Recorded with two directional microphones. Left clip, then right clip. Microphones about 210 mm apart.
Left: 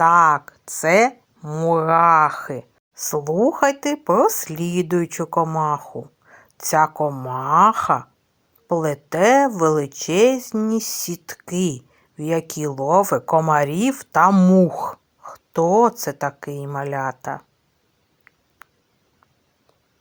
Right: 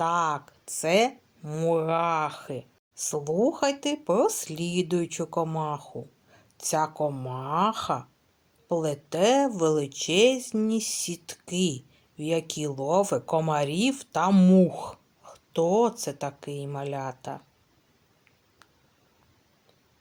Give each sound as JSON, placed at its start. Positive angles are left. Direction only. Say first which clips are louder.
{"t": 0.0, "sound": "speech", "louder": "left 12 dB", "side_deg": 20}
{"t": 2.2, "sound": "speech", "louder": "left 11 dB", "side_deg": 20}
{"t": 4.6, "sound": "speech", "louder": "left 6 dB", "side_deg": 5}
{"t": 5.1, "sound": "speech", "louder": "left 8 dB", "side_deg": 20}
{"t": 6.3, "sound": "a sound", "louder": "left 9 dB", "side_deg": 20}
{"t": 6.9, "sound": "speech", "louder": "left 7 dB", "side_deg": 15}
{"t": 11.4, "sound": "speech", "louder": "left 5 dB", "side_deg": 5}
{"t": 12.5, "sound": "speech", "louder": "left 8 dB", "side_deg": 20}
{"t": 16.5, "sound": "speech", "louder": "left 5 dB", "side_deg": 5}
{"t": 16.9, "sound": "speech", "louder": "left 9 dB", "side_deg": 20}